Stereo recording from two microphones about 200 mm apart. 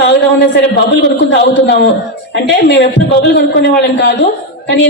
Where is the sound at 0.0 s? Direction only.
60° left (ahead or behind).